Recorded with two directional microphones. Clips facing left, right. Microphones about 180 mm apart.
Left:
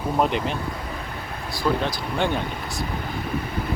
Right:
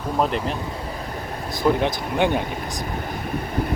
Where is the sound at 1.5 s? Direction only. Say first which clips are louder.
Right 4 dB; 20° right (ahead or behind).